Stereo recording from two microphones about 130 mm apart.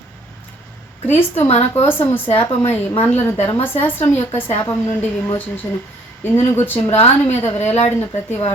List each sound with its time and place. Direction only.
1.0 s a woman's voice: 15° left (ahead or behind)
1.5 s speech: 55° left (ahead or behind)
1.9 s a woman's voice: 15° left (ahead or behind)
6.9 s speech: 55° left (ahead or behind)
7.9 s a woman's voice: 15° left (ahead or behind)